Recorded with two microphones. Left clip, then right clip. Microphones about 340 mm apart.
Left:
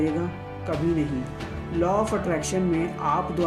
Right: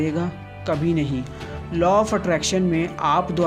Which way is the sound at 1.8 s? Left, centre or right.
Right.